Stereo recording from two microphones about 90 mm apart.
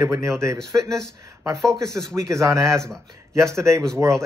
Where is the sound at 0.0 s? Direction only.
35° right (ahead or behind).